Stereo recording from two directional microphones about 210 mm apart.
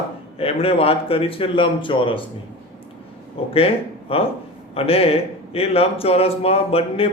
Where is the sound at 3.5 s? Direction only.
25° left (ahead or behind).